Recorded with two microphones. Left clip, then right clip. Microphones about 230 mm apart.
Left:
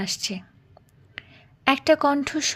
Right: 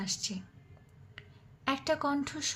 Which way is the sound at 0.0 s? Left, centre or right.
Left.